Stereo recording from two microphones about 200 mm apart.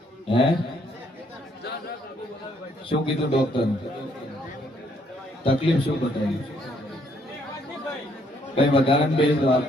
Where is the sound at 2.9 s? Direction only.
25° left (ahead or behind).